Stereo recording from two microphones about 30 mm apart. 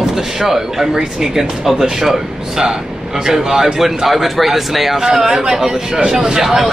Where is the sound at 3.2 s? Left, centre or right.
Centre.